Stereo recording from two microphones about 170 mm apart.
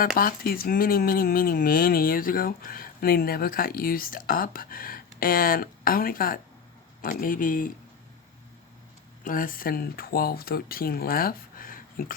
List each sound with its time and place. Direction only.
0.0 s speech: 55° left (ahead or behind)
9.2 s speech: 55° left (ahead or behind)